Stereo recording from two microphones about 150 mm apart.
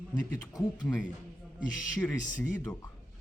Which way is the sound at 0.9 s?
10° left (ahead or behind).